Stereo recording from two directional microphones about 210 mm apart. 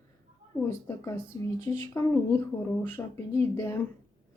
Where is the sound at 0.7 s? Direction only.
10° left (ahead or behind).